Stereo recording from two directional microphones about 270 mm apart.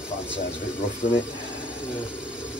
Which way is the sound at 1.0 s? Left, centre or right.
Left.